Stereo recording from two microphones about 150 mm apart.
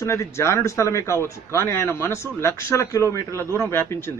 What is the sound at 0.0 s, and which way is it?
A man's voice, 20° left (ahead or behind).